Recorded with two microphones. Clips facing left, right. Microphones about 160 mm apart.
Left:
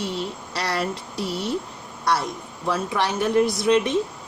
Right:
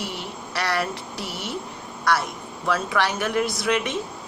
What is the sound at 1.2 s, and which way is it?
Speech, 75° right (ahead or behind).